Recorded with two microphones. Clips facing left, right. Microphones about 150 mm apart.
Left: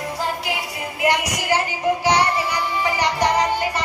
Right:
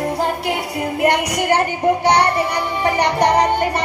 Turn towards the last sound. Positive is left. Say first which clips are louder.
# right 4 dB
turn(degrees=-60)  # may be behind; listen again after turning